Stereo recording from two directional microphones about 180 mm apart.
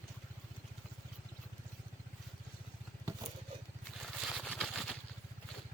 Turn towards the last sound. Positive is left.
turn(degrees=0)  # may be behind; listen again after turning